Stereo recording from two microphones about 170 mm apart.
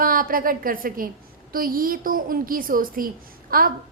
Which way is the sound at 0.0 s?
55° right (ahead or behind).